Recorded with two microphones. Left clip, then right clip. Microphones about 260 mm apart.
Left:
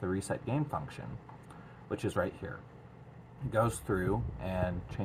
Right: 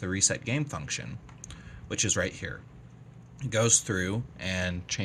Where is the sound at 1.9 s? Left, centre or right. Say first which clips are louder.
Right 4 dB; right.